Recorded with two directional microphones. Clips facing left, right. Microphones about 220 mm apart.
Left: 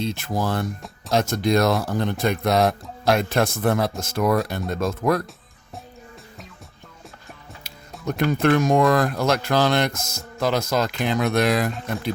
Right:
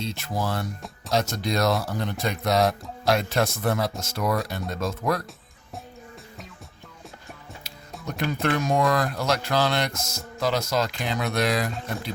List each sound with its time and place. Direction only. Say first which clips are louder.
0.0 s speech: left 4 dB; 50° left (ahead or behind)
7.9 s music: left 5 dB; centre (ahead or behind)
8.3 s speech: left 6 dB; 50° left (ahead or behind)